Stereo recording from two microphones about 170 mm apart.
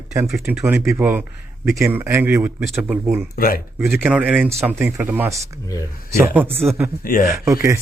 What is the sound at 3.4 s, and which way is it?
Speech, 60° left (ahead or behind).